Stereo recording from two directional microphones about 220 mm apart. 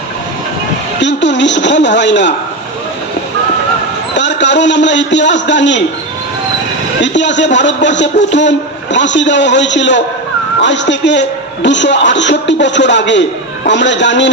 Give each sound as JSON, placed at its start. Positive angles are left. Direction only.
{"t": 1.0, "sound": "a man's voice", "side_deg": 55}
{"t": 4.1, "sound": "a man's voice", "side_deg": 55}
{"t": 7.0, "sound": "a man's voice", "side_deg": 55}